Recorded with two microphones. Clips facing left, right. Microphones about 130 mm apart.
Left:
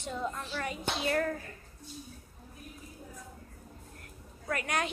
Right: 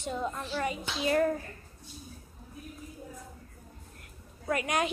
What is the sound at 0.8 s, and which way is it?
Speech, 60° left (ahead or behind).